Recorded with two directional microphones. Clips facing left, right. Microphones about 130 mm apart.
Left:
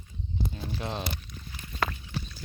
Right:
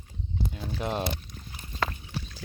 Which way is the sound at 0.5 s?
5° right (ahead or behind).